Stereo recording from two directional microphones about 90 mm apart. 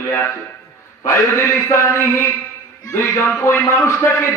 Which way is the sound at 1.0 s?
30° left (ahead or behind).